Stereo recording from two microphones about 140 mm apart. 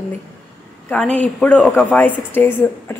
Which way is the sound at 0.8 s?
10° left (ahead or behind).